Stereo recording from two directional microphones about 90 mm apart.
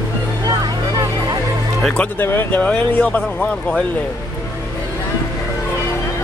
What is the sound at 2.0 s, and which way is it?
Speech, 25° left (ahead or behind).